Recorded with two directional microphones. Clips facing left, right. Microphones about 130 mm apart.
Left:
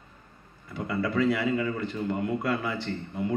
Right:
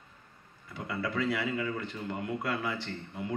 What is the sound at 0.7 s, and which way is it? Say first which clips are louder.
A man's voice: left 6 dB; 45° left (ahead or behind).